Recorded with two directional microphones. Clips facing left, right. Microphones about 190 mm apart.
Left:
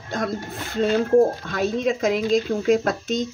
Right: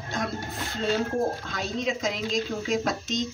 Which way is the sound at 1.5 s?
55° left (ahead or behind).